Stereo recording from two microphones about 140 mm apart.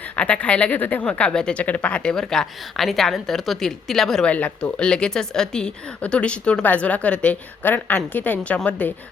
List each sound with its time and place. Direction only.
0.2 s speech: 10° left (ahead or behind)